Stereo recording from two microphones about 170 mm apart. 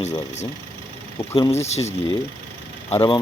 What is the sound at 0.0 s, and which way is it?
Speech, 40° left (ahead or behind).